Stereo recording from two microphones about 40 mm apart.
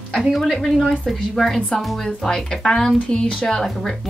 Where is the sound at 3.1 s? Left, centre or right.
Left.